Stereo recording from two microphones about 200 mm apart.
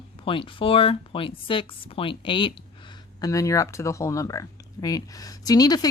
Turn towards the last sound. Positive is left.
turn(degrees=20)  # may be behind; listen again after turning